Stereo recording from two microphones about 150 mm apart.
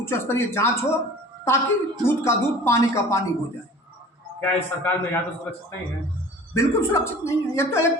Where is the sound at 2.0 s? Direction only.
20° left (ahead or behind).